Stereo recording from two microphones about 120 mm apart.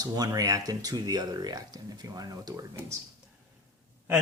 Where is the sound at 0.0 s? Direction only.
30° right (ahead or behind).